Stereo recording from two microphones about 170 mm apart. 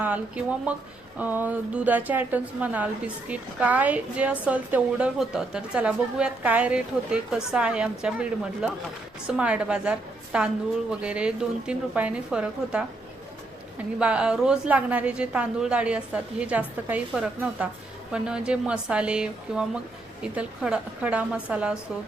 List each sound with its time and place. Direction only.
0.0 s a woman's voice: 10° right (ahead or behind)
14.0 s a woman's voice: 5° right (ahead or behind)